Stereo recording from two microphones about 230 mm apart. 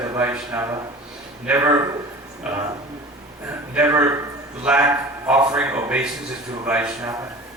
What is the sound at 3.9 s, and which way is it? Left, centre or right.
A man's voice, centre.